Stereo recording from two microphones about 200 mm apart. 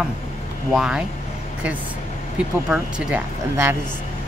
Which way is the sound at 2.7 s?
5° right (ahead or behind).